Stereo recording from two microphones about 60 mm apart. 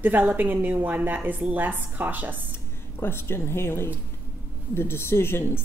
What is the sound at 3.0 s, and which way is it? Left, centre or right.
Speech, left.